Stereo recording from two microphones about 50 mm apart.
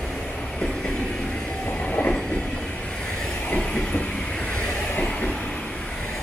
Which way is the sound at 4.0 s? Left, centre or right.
Left.